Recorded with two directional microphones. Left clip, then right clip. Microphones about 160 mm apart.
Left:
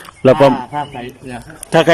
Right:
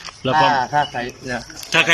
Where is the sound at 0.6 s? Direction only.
5° left (ahead or behind).